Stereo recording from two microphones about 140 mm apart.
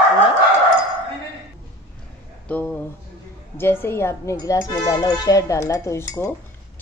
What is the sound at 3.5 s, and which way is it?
Speech, 15° left (ahead or behind).